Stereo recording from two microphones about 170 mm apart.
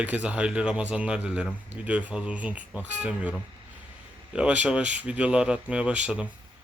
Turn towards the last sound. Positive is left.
turn(degrees=-5)  # may be behind; listen again after turning